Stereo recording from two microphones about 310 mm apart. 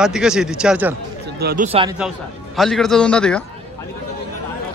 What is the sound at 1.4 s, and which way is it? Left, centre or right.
Speech, right.